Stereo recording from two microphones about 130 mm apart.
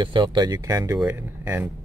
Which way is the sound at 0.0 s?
40° right (ahead or behind).